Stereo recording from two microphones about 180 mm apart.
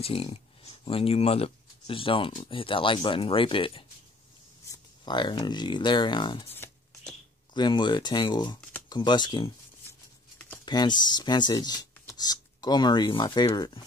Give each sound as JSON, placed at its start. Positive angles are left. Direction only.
{"t": 0.0, "sound": "speech", "side_deg": 30}
{"t": 5.0, "sound": "speech", "side_deg": 25}
{"t": 6.5, "sound": "a sound", "side_deg": 10}
{"t": 7.5, "sound": "speech", "side_deg": 25}
{"t": 10.6, "sound": "speech", "side_deg": 25}